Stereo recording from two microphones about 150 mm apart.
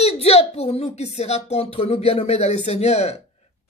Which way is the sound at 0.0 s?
45° left (ahead or behind).